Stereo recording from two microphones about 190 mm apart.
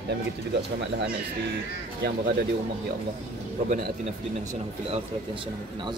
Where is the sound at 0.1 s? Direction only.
65° right (ahead or behind).